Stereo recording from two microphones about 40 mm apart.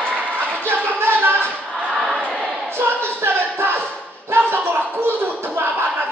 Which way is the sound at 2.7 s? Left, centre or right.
Right.